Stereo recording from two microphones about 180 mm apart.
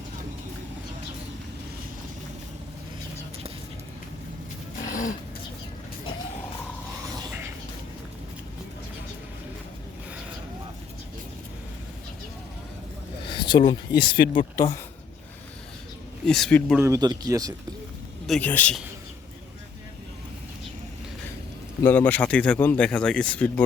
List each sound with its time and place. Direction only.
4.9 s a sound: 45° left (ahead or behind)
13.3 s speech: 25° left (ahead or behind)
16.2 s speech: 5° left (ahead or behind)
16.7 s speech: 15° right (ahead or behind)
18.3 s speech: 10° left (ahead or behind)
21.8 s speech: 10° left (ahead or behind)